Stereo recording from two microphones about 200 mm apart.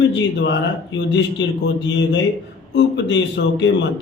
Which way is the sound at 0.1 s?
60° left (ahead or behind).